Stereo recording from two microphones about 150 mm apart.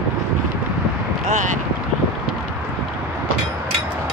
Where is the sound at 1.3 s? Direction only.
55° right (ahead or behind).